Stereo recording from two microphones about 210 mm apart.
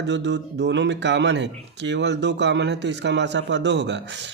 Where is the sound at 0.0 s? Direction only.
55° right (ahead or behind).